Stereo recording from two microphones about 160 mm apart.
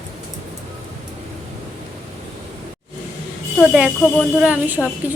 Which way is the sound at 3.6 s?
5° right (ahead or behind).